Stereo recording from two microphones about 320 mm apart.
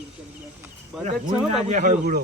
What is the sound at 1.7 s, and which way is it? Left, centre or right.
Speech, right.